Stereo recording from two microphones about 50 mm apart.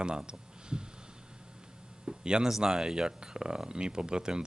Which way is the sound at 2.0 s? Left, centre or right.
Centre.